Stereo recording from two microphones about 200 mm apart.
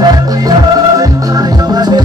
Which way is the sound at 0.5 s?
20° right (ahead or behind).